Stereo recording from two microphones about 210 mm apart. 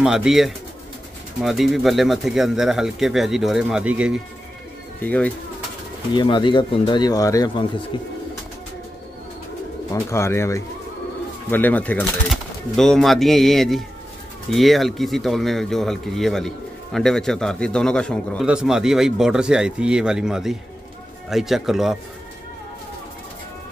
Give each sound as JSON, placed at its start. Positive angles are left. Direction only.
{"t": 0.0, "sound": "speech", "side_deg": -5}
{"t": 5.0, "sound": "speech", "side_deg": 5}
{"t": 6.1, "sound": "speech", "side_deg": 20}
{"t": 10.1, "sound": "speech", "side_deg": 10}